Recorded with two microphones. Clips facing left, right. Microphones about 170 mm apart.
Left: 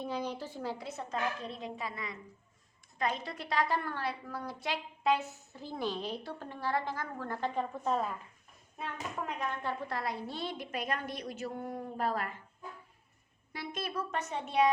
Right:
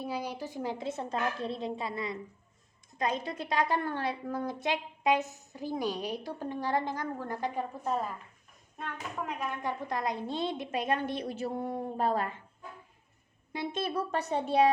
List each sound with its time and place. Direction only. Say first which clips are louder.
0.0 s a woman's voice: right 1 dB; 10° right (ahead or behind)
9.5 s a woman's voice: right 2 dB; 15° right (ahead or behind)
13.5 s a woman's voice: right 6 dB; 25° right (ahead or behind)